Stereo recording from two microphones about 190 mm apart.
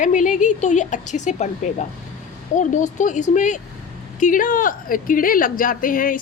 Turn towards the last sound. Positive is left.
turn(degrees=45)  # may be behind; listen again after turning